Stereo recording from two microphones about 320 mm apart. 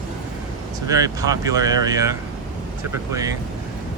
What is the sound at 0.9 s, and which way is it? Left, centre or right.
Speech, centre.